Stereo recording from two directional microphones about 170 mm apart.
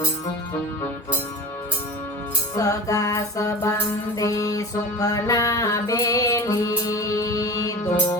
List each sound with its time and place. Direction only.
2.6 s music: 20° left (ahead or behind)